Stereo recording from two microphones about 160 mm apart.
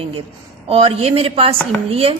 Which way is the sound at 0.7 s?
35° right (ahead or behind).